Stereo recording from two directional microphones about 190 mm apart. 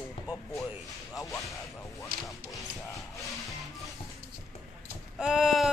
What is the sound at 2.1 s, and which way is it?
Speech, 50° right (ahead or behind).